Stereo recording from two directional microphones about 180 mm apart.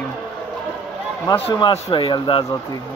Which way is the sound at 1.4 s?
30° left (ahead or behind).